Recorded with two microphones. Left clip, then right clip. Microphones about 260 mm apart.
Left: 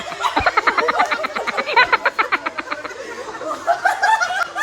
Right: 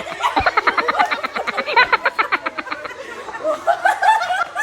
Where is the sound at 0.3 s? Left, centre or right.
Centre.